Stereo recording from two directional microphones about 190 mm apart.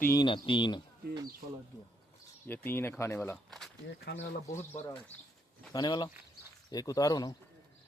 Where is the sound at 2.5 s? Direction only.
10° left (ahead or behind).